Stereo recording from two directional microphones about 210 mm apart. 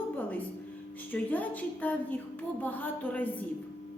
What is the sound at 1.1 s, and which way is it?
A woman's voice, 10° left (ahead or behind).